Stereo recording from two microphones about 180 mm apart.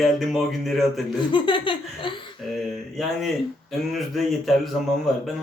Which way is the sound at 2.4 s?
Centre (ahead or behind).